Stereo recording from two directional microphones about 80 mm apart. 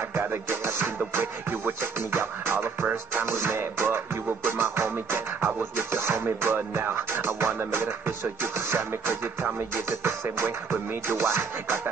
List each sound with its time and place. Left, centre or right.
0.1 s music: right